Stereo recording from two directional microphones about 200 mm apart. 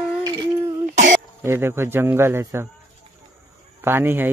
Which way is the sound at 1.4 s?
10° right (ahead or behind).